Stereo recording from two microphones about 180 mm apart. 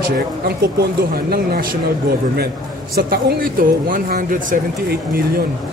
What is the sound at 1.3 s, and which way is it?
Speech, 55° right (ahead or behind).